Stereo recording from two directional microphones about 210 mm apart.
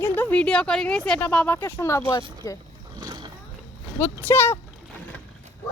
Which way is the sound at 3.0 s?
20° right (ahead or behind).